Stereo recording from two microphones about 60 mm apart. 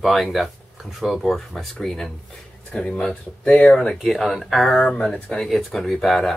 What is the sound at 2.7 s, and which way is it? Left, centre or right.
Speech, centre.